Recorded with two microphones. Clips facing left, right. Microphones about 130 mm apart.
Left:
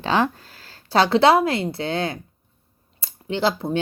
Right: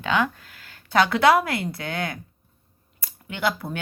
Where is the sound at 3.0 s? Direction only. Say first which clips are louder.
Left 4 dB; 30° left (ahead or behind).